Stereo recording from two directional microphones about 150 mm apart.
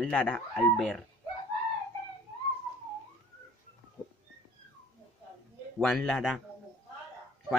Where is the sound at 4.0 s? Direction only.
20° left (ahead or behind).